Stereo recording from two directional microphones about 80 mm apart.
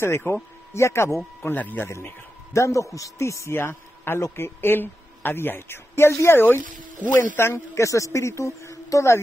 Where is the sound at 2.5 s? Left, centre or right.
Left.